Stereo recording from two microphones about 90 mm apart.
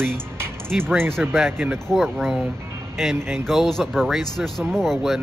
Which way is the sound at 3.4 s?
Centre (ahead or behind).